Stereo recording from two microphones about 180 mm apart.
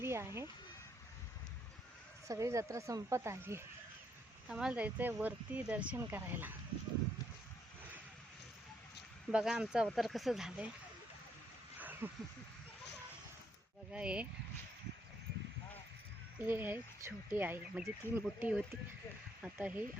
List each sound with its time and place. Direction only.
0.0 s a sound: 15° right (ahead or behind)
2.2 s speech: 15° right (ahead or behind)
4.4 s speech: 5° right (ahead or behind)
9.3 s speech: 5° right (ahead or behind)
11.8 s a sound: 10° right (ahead or behind)
13.9 s speech: 5° right (ahead or behind)
16.4 s speech: 10° right (ahead or behind)